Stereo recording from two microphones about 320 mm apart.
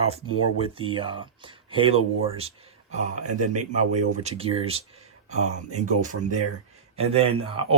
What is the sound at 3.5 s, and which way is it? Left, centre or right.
Speech, right.